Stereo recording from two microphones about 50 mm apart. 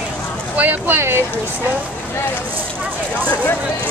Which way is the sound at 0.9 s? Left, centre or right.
Right.